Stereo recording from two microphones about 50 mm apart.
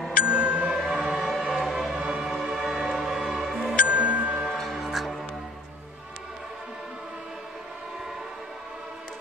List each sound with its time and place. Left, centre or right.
0.3 s music: centre
1.0 s music: centre
2.0 s music: centre
2.2 s music: centre
3.8 s music: right
4.5 s music: centre